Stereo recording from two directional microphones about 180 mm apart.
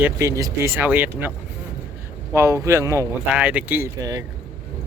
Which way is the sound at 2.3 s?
15° right (ahead or behind).